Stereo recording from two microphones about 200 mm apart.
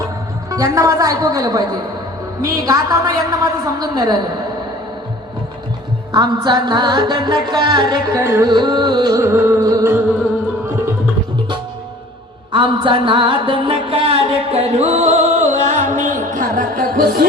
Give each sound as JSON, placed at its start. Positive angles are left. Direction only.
{"t": 0.5, "sound": "music", "side_deg": -15}
{"t": 2.6, "sound": "music", "side_deg": -15}
{"t": 6.1, "sound": "music", "side_deg": -20}
{"t": 12.5, "sound": "music", "side_deg": -25}